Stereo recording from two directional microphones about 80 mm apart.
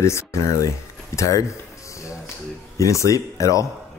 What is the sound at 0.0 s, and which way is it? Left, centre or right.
Speech, left.